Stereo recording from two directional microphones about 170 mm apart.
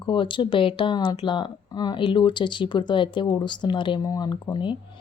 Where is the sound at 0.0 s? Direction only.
30° left (ahead or behind).